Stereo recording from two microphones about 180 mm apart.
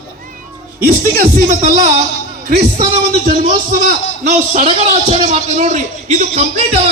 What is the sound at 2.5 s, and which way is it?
A man's voice, 40° right (ahead or behind).